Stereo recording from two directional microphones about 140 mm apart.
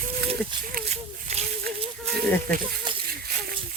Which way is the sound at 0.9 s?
50° right (ahead or behind).